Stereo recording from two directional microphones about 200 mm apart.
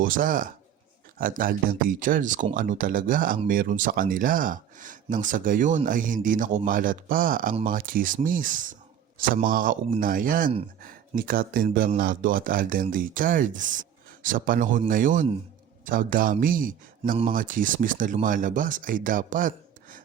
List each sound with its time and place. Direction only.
0.0 s speech: 45° right (ahead or behind)